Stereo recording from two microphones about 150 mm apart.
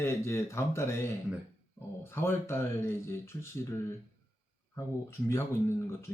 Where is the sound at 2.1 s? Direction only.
15° left (ahead or behind).